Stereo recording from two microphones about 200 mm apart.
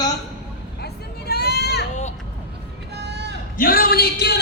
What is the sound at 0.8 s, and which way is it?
Vehicle, 55° left (ahead or behind).